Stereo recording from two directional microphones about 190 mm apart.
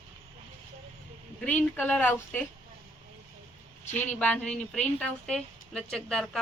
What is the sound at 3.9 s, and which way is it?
A woman's voice, 10° left (ahead or behind).